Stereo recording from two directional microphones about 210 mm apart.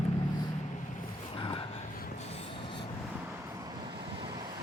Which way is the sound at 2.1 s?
30° left (ahead or behind).